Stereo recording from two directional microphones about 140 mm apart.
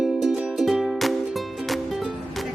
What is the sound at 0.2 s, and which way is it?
Music, 5° right (ahead or behind).